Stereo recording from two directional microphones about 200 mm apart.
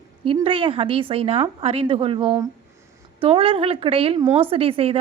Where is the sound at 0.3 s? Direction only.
25° right (ahead or behind).